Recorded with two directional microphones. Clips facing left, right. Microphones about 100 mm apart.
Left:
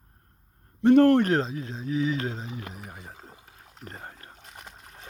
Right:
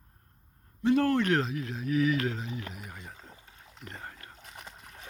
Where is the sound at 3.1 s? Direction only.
35° left (ahead or behind).